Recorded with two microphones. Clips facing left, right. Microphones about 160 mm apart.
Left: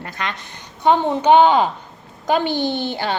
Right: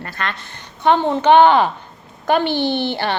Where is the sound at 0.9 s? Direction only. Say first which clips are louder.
Right 1 dB; 70° right (ahead or behind).